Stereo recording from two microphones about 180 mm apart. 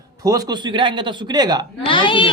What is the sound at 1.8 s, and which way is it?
Speech, 25° left (ahead or behind).